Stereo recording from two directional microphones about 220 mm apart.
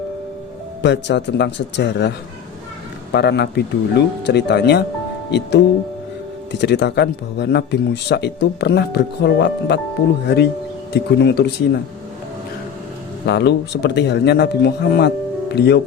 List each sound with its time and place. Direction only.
0.8 s speech: 50° left (ahead or behind)
13.2 s speech: 50° left (ahead or behind)